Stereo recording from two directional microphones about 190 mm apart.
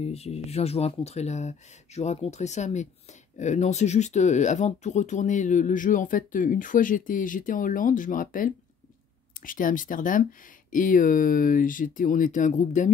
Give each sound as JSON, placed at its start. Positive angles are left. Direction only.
{"t": 0.0, "sound": "speech", "side_deg": 35}